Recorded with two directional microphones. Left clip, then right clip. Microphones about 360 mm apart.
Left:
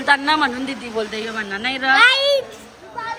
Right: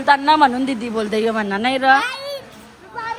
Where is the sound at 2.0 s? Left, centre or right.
Left.